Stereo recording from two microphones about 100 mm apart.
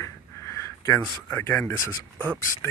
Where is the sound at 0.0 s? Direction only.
25° left (ahead or behind).